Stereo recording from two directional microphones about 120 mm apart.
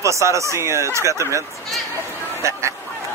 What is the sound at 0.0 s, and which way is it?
Speech, 25° right (ahead or behind).